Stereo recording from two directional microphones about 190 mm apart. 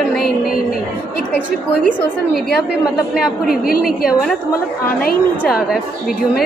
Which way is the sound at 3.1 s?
5° right (ahead or behind).